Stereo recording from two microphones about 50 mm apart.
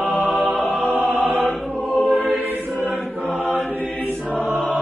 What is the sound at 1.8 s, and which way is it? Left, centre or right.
Music, centre.